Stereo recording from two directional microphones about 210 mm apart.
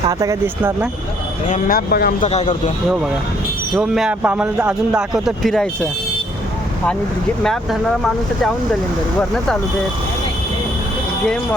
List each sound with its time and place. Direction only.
0.1 s speech: 15° right (ahead or behind)
1.5 s speech: 40° left (ahead or behind)
2.2 s speech: 30° left (ahead or behind)
3.8 s a man's voice: 5° right (ahead or behind)
7.4 s a man's voice: centre (ahead or behind)